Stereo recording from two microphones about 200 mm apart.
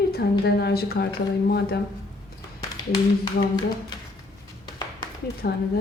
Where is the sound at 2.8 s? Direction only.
20° left (ahead or behind).